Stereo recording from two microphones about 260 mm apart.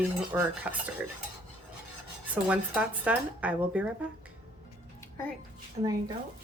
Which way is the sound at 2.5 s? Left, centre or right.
Centre.